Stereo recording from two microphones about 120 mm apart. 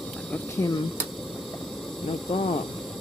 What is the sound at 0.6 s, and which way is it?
Speech, 25° left (ahead or behind).